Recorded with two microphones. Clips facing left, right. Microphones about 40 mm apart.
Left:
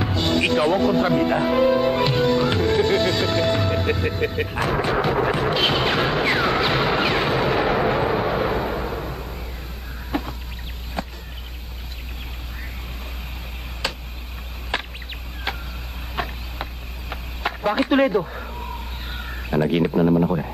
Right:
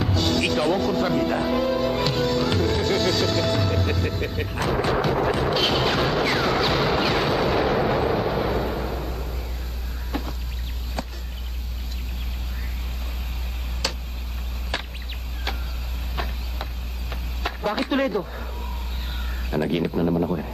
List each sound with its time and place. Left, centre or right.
0.0 s music: centre
0.6 s speech: centre
4.6 s thunder: centre
5.5 s music: centre
10.1 s a sound: left
13.8 s tick: left
14.7 s a sound: left
16.2 s insect: left
17.1 s a sound: centre
19.1 s speech: centre